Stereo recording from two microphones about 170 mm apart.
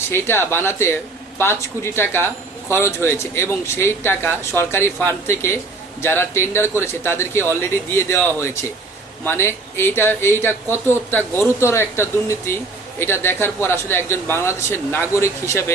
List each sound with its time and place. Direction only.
0.0 s a man's voice: 15° left (ahead or behind)